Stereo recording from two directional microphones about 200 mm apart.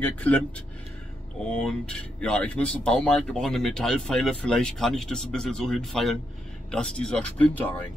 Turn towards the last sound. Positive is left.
turn(degrees=10)  # may be behind; listen again after turning